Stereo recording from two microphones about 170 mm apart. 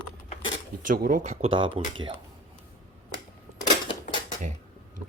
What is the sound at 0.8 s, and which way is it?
Speech, 55° right (ahead or behind).